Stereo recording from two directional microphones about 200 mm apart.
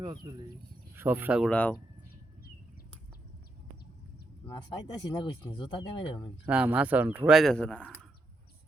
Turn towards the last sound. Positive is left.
turn(degrees=5)  # may be behind; listen again after turning